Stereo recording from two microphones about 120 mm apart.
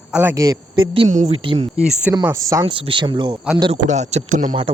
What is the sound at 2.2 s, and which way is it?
Speech, 25° right (ahead or behind).